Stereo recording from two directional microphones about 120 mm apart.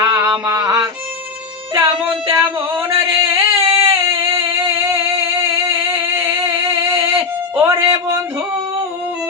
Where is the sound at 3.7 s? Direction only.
50° right (ahead or behind).